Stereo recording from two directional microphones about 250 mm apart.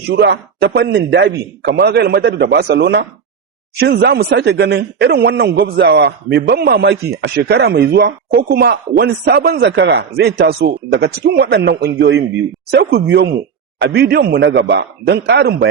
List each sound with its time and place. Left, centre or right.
0.1 s a man's voice: right